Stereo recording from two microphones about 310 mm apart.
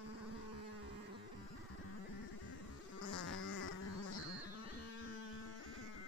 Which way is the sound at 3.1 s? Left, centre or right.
Left.